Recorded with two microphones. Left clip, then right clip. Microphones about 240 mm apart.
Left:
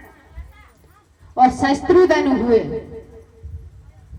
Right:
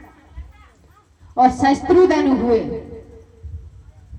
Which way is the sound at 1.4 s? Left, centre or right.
Left.